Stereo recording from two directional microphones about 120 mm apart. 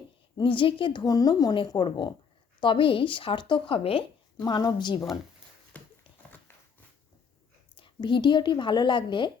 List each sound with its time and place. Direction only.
0.3 s a woman's voice: 45° left (ahead or behind)
5.7 s clip-clop: 10° left (ahead or behind)
7.8 s a woman's voice: 45° left (ahead or behind)